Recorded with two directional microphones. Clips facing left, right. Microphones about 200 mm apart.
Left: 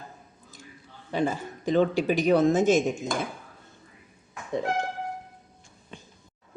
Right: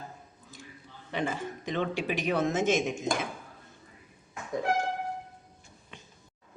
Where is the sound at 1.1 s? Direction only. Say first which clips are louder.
Left 5 dB; 35° left (ahead or behind).